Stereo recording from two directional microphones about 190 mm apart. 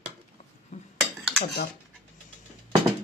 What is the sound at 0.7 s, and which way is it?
Cutlery, 40° left (ahead or behind).